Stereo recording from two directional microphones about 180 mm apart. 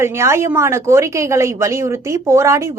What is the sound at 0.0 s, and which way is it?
A woman's voice, 15° right (ahead or behind).